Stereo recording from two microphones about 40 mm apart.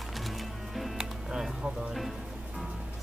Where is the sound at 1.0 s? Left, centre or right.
Centre.